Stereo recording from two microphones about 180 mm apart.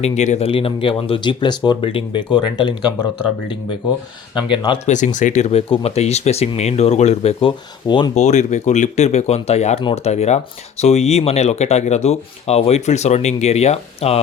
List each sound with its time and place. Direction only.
0.0 s speech: 40° left (ahead or behind); by 3.1 s 25° left (ahead or behind)
4.4 s speech: 25° left (ahead or behind)
4.9 s speech: 40° left (ahead or behind); by 8.1 s 25° left (ahead or behind)
8.1 s speech: 40° left (ahead or behind)